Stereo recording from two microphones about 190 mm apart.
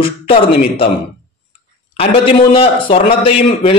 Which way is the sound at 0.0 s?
30° left (ahead or behind).